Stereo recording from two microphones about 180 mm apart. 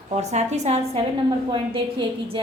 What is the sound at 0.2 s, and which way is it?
Speech, 40° right (ahead or behind).